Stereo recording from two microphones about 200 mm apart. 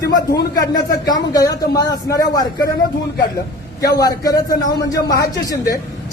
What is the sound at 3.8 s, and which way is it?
A woman's voice, 15° left (ahead or behind).